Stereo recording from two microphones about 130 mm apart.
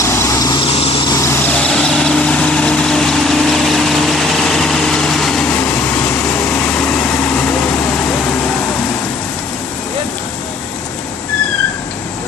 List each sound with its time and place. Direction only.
0.0 s vehicle: 20° left (ahead or behind)
0.7 s vehicle: 45° left (ahead or behind)
1.5 s vehicle: 5° left (ahead or behind)
6.9 s vehicle: 10° left (ahead or behind)